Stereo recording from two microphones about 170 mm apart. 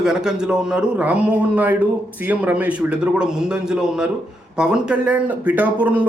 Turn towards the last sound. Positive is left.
turn(degrees=-10)  # may be behind; listen again after turning